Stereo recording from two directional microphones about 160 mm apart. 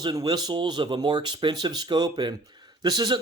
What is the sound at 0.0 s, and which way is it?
A man's voice, 25° right (ahead or behind).